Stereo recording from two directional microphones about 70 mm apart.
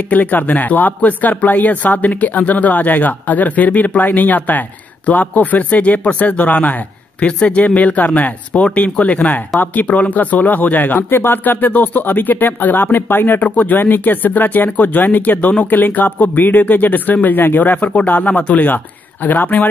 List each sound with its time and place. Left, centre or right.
0.1 s speech: left